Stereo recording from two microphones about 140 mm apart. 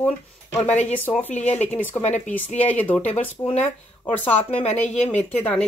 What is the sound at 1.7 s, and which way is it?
Speech, 15° left (ahead or behind).